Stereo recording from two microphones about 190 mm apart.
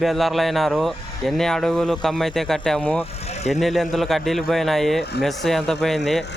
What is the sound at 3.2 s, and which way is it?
Vehicle, 35° left (ahead or behind).